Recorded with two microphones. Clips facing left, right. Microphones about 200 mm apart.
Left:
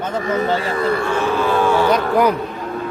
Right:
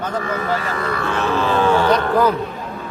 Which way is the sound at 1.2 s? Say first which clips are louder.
Right 2 dB; 10° left (ahead or behind).